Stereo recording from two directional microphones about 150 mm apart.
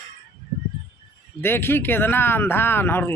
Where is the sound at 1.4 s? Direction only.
15° left (ahead or behind).